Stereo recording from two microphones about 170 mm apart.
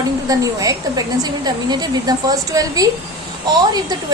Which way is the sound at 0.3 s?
20° right (ahead or behind).